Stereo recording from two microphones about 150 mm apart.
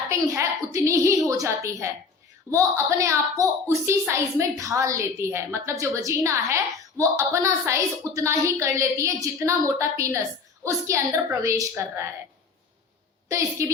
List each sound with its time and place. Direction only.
0.1 s a woman's voice: 20° right (ahead or behind)
13.3 s a woman's voice: 20° right (ahead or behind)